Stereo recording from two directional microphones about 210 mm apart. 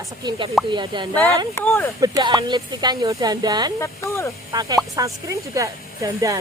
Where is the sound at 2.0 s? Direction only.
20° right (ahead or behind).